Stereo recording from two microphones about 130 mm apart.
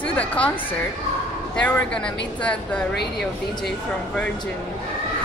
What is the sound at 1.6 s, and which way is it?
A woman's voice, 10° left (ahead or behind).